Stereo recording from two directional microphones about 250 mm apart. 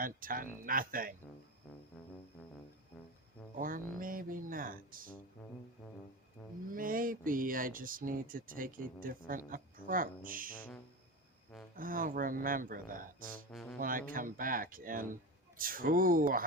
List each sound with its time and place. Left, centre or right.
0.0 s speech: right
4.0 s speech: right
6.7 s speech: right
11.8 s speech: right
13.5 s speech: centre
13.7 s speech: right